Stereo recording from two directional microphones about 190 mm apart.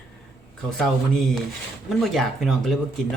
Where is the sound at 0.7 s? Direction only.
5° left (ahead or behind).